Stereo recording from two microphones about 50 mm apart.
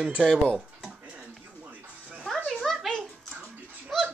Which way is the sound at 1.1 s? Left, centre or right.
Right.